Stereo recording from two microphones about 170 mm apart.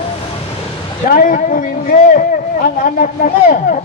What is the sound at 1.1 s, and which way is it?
Speech, 55° left (ahead or behind).